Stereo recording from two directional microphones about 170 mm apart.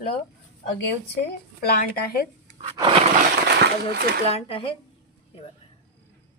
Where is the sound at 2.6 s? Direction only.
30° right (ahead or behind).